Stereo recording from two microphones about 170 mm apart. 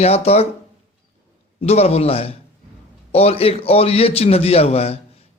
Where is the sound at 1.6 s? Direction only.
35° left (ahead or behind).